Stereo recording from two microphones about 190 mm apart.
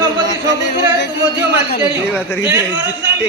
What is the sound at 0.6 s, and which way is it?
Music, 65° left (ahead or behind).